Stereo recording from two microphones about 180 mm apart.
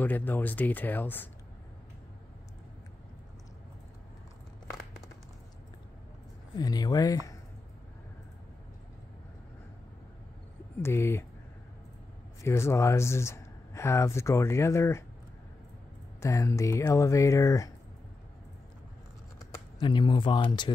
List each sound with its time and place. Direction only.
0.0 s speech: 10° left (ahead or behind)
6.5 s speech: 20° left (ahead or behind)
10.8 s speech: 15° left (ahead or behind)
12.4 s speech: 15° left (ahead or behind)
16.2 s speech: 15° left (ahead or behind)
19.8 s speech: 25° left (ahead or behind)